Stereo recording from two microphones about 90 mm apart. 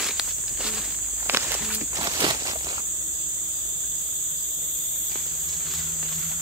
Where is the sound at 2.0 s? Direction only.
55° right (ahead or behind).